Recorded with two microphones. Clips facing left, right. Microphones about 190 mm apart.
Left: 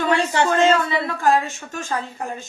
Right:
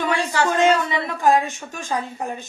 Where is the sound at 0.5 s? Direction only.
15° right (ahead or behind).